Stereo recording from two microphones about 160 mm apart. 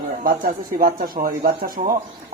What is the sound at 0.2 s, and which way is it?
Speech, 60° right (ahead or behind).